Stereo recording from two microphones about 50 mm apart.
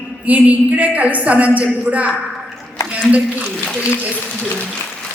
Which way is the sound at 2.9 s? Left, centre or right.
Right.